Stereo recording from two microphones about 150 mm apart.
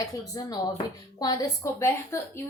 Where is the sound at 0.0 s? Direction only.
25° left (ahead or behind).